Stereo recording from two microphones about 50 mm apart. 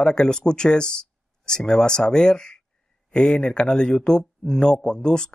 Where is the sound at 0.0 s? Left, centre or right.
Centre.